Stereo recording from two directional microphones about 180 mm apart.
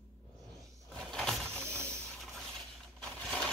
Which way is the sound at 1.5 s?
15° right (ahead or behind).